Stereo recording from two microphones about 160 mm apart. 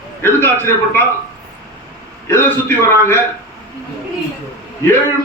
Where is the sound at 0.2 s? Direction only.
15° left (ahead or behind).